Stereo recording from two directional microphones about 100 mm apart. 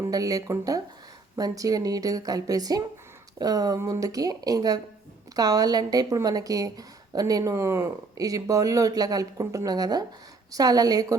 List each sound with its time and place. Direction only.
0.0 s speech: 35° right (ahead or behind)